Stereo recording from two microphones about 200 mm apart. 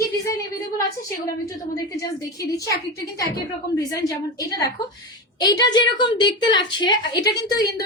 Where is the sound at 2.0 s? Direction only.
15° left (ahead or behind).